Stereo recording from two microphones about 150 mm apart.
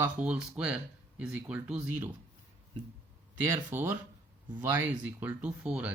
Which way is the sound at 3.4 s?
15° right (ahead or behind).